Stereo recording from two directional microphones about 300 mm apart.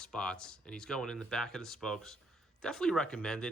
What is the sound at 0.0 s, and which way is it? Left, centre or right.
Speech, centre.